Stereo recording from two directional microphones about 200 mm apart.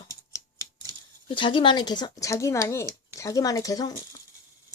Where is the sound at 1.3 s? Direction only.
25° left (ahead or behind).